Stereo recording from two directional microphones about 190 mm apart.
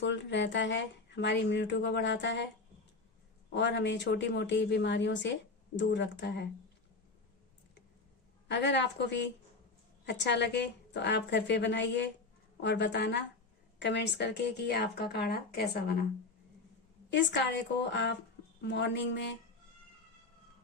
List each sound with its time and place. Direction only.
0.0 s speech: 70° left (ahead or behind)
3.5 s speech: 65° left (ahead or behind)
8.4 s speech: 65° left (ahead or behind)
17.1 s speech: 65° left (ahead or behind)